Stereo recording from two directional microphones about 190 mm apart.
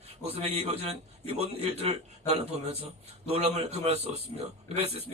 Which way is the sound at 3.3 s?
35° right (ahead or behind).